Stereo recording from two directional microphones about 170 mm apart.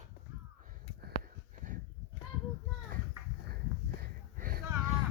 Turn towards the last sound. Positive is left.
turn(degrees=-60)  # may be behind; listen again after turning